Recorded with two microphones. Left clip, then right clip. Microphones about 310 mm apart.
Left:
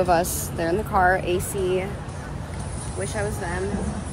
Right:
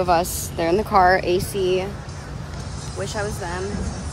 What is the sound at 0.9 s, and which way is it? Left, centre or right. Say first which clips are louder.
Speech: right 4 dB; right.